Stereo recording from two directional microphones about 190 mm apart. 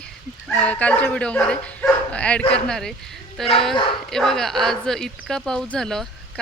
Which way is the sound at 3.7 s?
25° left (ahead or behind).